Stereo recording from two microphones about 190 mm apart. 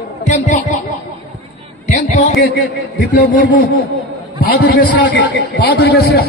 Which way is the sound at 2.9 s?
50° left (ahead or behind).